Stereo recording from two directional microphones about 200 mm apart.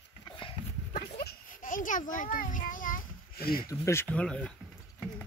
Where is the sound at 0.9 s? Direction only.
45° left (ahead or behind).